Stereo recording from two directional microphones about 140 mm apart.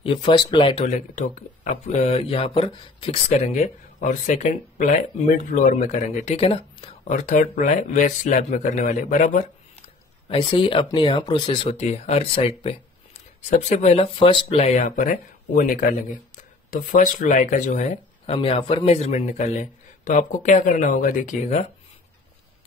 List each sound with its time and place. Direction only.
0.0 s speech: 35° left (ahead or behind)
0.8 s a man's voice: 65° left (ahead or behind)
1.9 s speech: 45° left (ahead or behind)
3.3 s a man's voice: 55° left (ahead or behind); by 7.0 s 40° left (ahead or behind)
7.1 s a man's voice: 60° left (ahead or behind)
10.2 s speech: 40° left (ahead or behind)
13.4 s speech: 55° left (ahead or behind)
14.9 s speech: 70° left (ahead or behind)
18.2 s a man's voice: 40° left (ahead or behind); by 21.6 s 60° left (ahead or behind)